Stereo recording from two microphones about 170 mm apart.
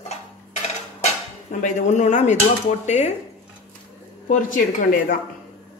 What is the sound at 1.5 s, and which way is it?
A woman's voice, 45° left (ahead or behind).